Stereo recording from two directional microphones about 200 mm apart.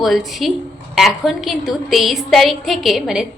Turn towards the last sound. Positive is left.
turn(degrees=0)  # may be behind; listen again after turning